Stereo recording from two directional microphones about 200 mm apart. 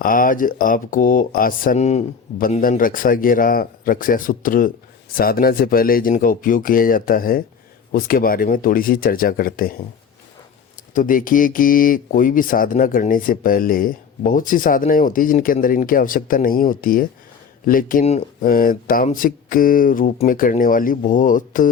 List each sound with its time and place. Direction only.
0.0 s speech: 45° left (ahead or behind)
10.9 s speech: 40° left (ahead or behind)